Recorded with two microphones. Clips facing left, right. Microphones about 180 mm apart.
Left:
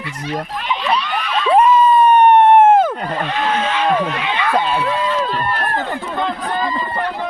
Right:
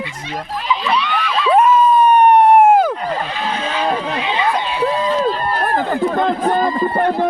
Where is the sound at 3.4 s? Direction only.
35° right (ahead or behind).